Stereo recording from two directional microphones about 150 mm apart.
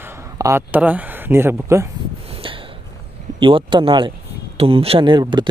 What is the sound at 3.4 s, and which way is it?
Speech, 35° right (ahead or behind).